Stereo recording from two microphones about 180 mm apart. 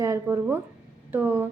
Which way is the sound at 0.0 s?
15° right (ahead or behind).